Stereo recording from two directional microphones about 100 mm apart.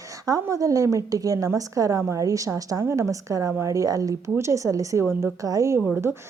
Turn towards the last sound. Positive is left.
turn(degrees=-25)  # may be behind; listen again after turning